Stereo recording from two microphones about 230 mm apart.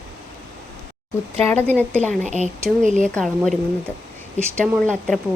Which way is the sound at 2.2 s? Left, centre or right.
Right.